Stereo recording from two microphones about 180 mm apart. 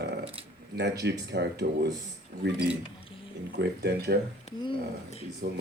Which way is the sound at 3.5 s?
65° right (ahead or behind).